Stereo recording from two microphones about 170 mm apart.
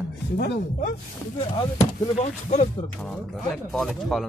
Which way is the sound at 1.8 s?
40° left (ahead or behind).